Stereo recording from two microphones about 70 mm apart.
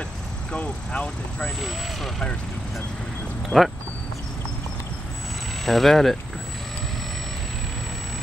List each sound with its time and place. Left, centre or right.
0.5 s speech: centre
1.6 s speech: centre
3.4 s speech: centre
5.7 s speech: centre